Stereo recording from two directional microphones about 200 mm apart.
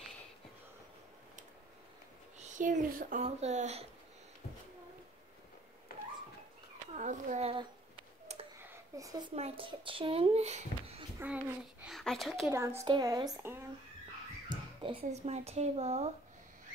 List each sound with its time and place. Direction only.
2.3 s speech: 40° right (ahead or behind)
7.0 s speech: 35° right (ahead or behind)
8.9 s a woman's voice: 15° right (ahead or behind)
9.3 s speech: 30° right (ahead or behind)
11.1 s a child's voice: 10° right (ahead or behind)
12.4 s a woman's voice: 15° right (ahead or behind)
14.5 s speech: 25° right (ahead or behind)